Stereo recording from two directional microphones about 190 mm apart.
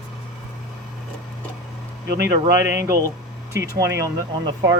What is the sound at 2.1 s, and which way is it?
Speech, 60° right (ahead or behind).